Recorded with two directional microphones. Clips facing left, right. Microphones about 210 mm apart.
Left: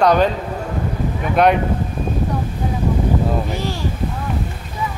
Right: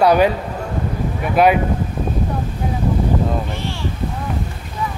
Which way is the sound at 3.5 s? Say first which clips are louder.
Left 3 dB; 40° left (ahead or behind).